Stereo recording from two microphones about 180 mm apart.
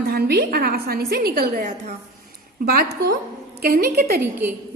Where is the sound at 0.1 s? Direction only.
55° right (ahead or behind).